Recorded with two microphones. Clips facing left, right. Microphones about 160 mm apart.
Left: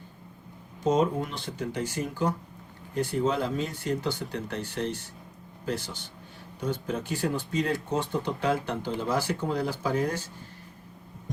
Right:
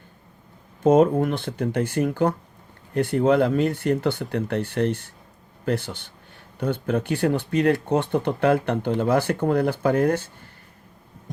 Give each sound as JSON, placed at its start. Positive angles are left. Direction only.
{"t": 0.8, "sound": "speech", "side_deg": -55}